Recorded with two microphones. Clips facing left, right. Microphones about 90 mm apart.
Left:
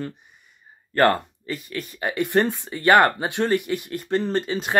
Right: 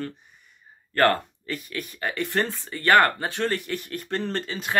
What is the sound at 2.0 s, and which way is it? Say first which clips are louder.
Speech: left 5 dB; 15° left (ahead or behind).